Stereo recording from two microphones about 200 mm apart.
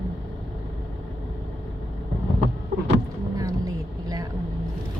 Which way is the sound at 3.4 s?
15° right (ahead or behind).